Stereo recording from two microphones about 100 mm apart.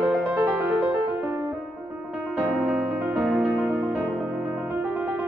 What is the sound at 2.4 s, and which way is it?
Music, centre (ahead or behind).